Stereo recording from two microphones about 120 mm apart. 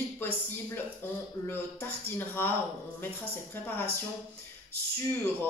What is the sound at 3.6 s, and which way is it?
Speech, 15° left (ahead or behind).